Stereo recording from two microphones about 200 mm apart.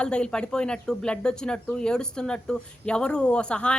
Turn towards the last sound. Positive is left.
turn(degrees=5)  # may be behind; listen again after turning